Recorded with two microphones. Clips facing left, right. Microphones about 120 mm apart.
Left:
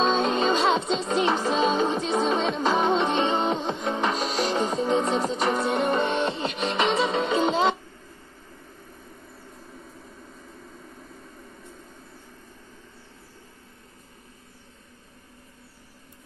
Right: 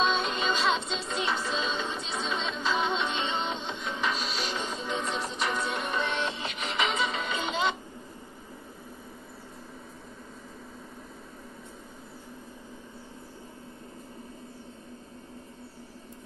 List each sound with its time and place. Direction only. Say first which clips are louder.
0.0 s music: left 6 dB; 40° left (ahead or behind)